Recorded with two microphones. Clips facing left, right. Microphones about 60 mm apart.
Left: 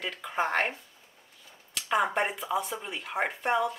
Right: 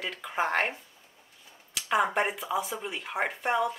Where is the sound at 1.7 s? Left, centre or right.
Centre.